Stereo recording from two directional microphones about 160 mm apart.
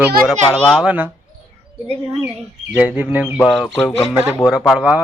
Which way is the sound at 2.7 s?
10° right (ahead or behind).